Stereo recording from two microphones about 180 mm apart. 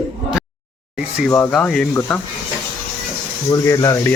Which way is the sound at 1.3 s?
5° left (ahead or behind).